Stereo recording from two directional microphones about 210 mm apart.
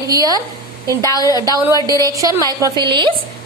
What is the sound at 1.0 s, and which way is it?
Speech, 15° left (ahead or behind).